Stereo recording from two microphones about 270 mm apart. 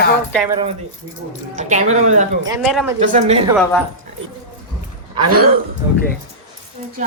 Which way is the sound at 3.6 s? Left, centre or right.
Centre.